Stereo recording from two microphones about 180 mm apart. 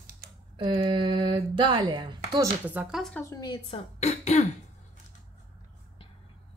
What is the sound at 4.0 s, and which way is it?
Throat clearing, 35° left (ahead or behind).